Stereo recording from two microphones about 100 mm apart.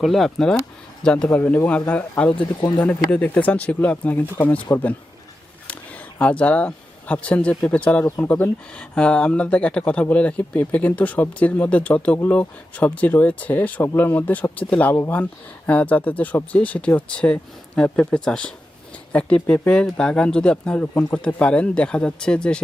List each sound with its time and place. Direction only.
0.0 s speech: centre (ahead or behind)
2.3 s speech: 50° left (ahead or behind)
2.7 s speech: 15° left (ahead or behind)
5.6 s a sound: 15° left (ahead or behind)
7.5 s speech: 10° left (ahead or behind)